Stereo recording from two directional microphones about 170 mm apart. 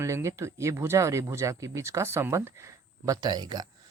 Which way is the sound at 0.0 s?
15° right (ahead or behind).